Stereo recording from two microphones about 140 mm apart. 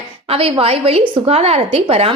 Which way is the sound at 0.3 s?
40° right (ahead or behind).